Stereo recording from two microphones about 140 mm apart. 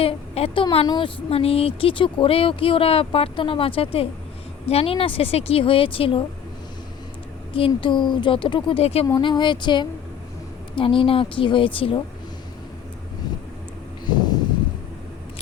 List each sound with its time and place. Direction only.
0.0 s a woman's voice: 45° left (ahead or behind)
7.7 s speech: 35° left (ahead or behind)
9.0 s speech: 30° left (ahead or behind)
14.1 s a sound: 30° left (ahead or behind)